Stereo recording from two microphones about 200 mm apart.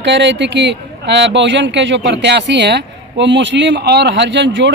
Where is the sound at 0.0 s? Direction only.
60° right (ahead or behind).